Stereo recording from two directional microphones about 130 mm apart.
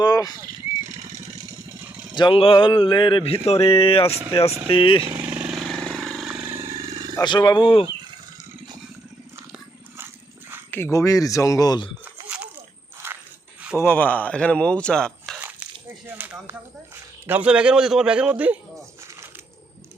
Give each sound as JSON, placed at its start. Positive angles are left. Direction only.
{"t": 0.0, "sound": "speech", "side_deg": 30}
{"t": 2.1, "sound": "a sound", "side_deg": 40}
{"t": 5.1, "sound": "vehicle", "side_deg": -15}
{"t": 5.5, "sound": "vehicle", "side_deg": 0}
{"t": 6.4, "sound": "vehicle", "side_deg": -20}
{"t": 6.7, "sound": "roar", "side_deg": -45}
{"t": 6.9, "sound": "roaring cats", "side_deg": -30}
{"t": 7.2, "sound": "speech", "side_deg": 30}
{"t": 10.7, "sound": "speech", "side_deg": 20}
{"t": 13.0, "sound": "a sound", "side_deg": -20}
{"t": 13.7, "sound": "speech", "side_deg": 15}
{"t": 16.1, "sound": "a man's voice", "side_deg": -15}